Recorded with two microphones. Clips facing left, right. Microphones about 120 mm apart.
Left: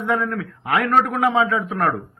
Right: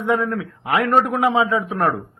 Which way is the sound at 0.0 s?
20° right (ahead or behind).